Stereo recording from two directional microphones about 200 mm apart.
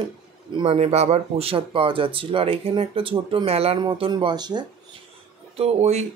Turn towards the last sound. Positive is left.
turn(degrees=-30)  # may be behind; listen again after turning